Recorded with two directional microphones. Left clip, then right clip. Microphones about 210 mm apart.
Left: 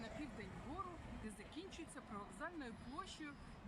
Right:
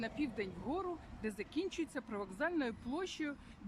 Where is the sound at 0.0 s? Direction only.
45° right (ahead or behind).